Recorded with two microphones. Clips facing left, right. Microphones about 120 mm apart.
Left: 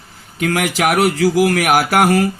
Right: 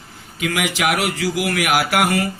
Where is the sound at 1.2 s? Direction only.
45° left (ahead or behind).